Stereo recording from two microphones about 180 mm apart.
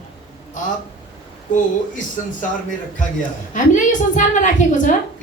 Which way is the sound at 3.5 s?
45° left (ahead or behind).